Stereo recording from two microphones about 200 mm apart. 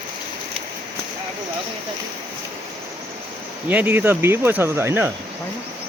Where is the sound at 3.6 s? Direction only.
10° right (ahead or behind).